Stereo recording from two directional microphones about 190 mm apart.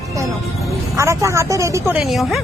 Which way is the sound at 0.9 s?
15° right (ahead or behind).